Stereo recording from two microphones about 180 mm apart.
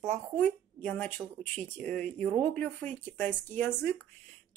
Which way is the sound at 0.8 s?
10° left (ahead or behind).